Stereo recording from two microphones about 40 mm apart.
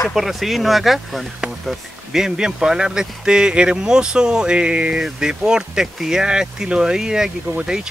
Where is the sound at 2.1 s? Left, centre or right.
Centre.